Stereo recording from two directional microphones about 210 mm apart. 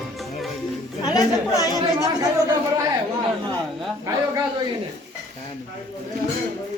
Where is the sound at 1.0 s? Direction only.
20° left (ahead or behind).